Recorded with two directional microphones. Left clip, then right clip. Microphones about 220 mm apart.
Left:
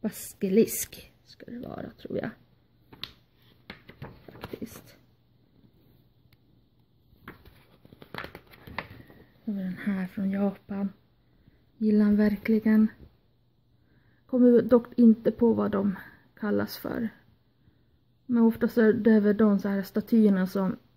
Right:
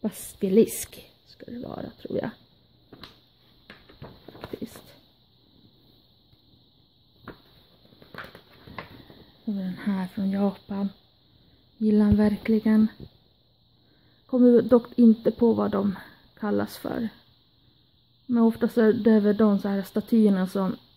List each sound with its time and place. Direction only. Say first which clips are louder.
0.0 s speech: right 3 dB; 5° right (ahead or behind)
9.6 s a sound: right 2 dB; 5° right (ahead or behind)
11.8 s speech: right 2 dB; 5° right (ahead or behind)
14.2 s speech: right 2 dB; 5° right (ahead or behind)
18.3 s speech: right 2 dB; 5° right (ahead or behind)